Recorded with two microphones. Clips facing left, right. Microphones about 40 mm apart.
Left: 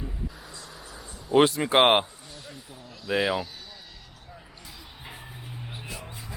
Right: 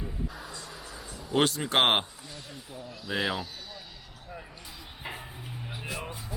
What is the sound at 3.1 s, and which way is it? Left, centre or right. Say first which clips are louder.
Speech: left 5 dB; centre.